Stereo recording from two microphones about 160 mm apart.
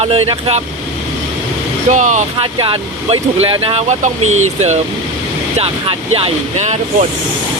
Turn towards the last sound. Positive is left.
turn(degrees=-40)  # may be behind; listen again after turning